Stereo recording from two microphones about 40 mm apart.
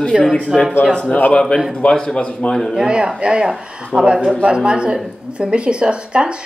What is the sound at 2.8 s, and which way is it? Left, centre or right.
A woman's voice, right.